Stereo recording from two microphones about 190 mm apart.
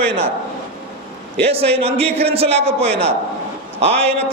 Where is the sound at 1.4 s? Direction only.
30° right (ahead or behind).